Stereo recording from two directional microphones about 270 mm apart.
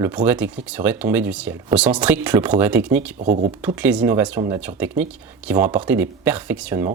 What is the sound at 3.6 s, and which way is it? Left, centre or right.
Speech, centre.